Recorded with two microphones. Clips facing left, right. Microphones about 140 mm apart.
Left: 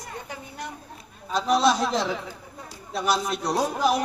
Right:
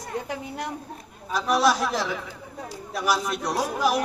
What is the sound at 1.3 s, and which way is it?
A man's voice, 25° left (ahead or behind).